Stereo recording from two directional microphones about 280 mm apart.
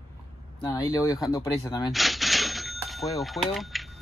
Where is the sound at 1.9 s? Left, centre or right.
Centre.